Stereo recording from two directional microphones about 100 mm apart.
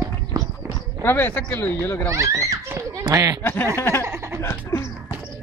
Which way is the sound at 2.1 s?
30° right (ahead or behind).